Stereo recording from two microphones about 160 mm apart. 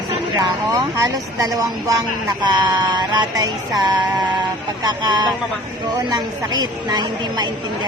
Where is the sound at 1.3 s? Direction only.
20° right (ahead or behind).